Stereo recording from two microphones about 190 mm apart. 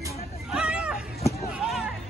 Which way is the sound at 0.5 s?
5° right (ahead or behind).